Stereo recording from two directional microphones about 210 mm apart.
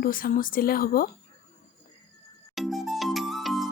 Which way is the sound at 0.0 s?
45° left (ahead or behind).